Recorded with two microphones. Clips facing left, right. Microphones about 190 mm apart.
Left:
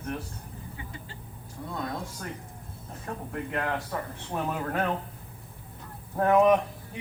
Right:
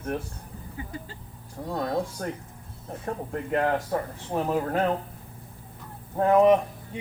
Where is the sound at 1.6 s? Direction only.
50° right (ahead or behind); by 4.9 s 30° right (ahead or behind).